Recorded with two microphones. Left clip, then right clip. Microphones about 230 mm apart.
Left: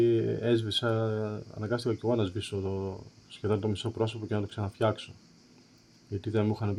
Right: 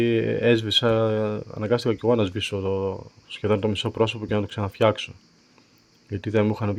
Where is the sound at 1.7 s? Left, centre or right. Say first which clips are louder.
Right 8 dB; right.